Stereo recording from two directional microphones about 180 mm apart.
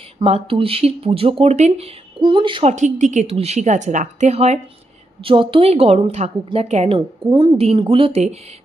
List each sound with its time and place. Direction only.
0.2 s a woman's voice: 30° right (ahead or behind)
2.7 s a woman's voice: 40° right (ahead or behind)